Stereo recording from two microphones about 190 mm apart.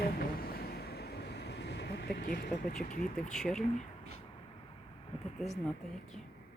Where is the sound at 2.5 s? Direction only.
40° left (ahead or behind).